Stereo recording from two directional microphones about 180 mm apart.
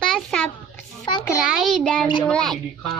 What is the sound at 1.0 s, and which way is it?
Speech, 25° left (ahead or behind).